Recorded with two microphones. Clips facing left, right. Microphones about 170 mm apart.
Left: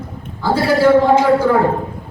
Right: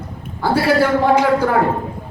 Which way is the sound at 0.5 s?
60° right (ahead or behind).